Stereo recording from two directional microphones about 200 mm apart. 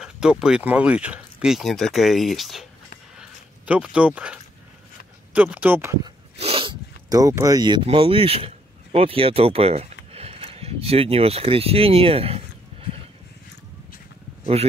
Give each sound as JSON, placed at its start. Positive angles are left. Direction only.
{"t": 0.0, "sound": "speech", "side_deg": -5}
{"t": 3.2, "sound": "a sound", "side_deg": -5}
{"t": 5.3, "sound": "speech", "side_deg": -10}
{"t": 6.3, "sound": "speech", "side_deg": -30}
{"t": 14.4, "sound": "speech", "side_deg": -30}